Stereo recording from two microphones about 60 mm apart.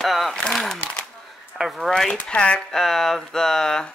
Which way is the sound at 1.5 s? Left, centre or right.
Centre.